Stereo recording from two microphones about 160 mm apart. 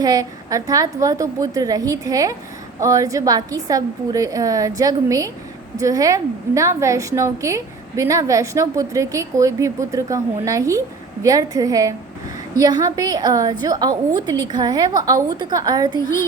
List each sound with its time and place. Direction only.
0.0 s a woman's voice: 20° right (ahead or behind)